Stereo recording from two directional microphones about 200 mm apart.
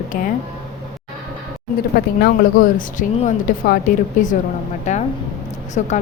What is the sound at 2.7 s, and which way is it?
A woman's voice, 40° left (ahead or behind).